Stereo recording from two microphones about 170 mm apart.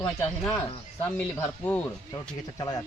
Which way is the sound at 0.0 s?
5° left (ahead or behind).